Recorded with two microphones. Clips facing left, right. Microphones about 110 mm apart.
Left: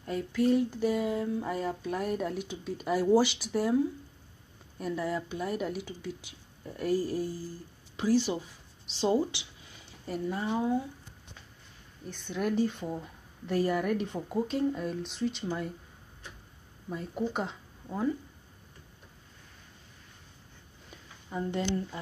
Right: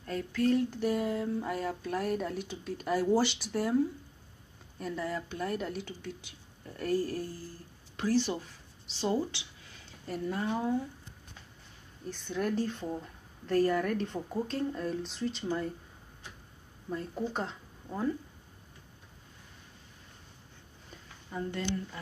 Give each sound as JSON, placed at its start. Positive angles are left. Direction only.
{"t": 0.0, "sound": "a sound", "side_deg": 10}
{"t": 0.7, "sound": "speech", "side_deg": 0}
{"t": 8.8, "sound": "speech", "side_deg": 20}
{"t": 10.0, "sound": "a woman's voice", "side_deg": 5}
{"t": 12.1, "sound": "a woman's voice", "side_deg": 0}
{"t": 16.9, "sound": "speech", "side_deg": 10}
{"t": 21.3, "sound": "speech", "side_deg": 20}